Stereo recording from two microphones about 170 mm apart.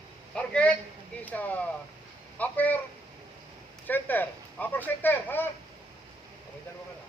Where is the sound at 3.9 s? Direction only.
10° left (ahead or behind).